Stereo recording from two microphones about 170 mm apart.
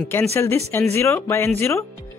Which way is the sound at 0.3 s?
15° left (ahead or behind).